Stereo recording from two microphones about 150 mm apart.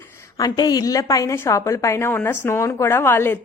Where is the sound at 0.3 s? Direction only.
25° left (ahead or behind).